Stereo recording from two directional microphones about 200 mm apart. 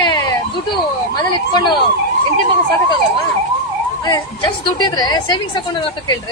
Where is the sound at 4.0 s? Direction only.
20° left (ahead or behind).